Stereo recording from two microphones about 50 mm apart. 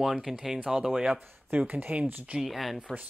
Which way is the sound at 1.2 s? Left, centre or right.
Right.